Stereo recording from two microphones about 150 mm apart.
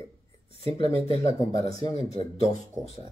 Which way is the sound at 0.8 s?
45° left (ahead or behind).